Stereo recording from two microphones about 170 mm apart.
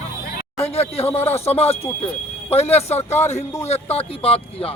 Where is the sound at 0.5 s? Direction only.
35° left (ahead or behind).